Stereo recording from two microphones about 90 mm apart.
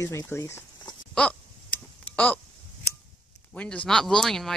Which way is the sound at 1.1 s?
15° left (ahead or behind).